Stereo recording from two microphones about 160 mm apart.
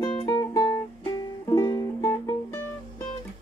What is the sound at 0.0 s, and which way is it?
Music, 30° left (ahead or behind).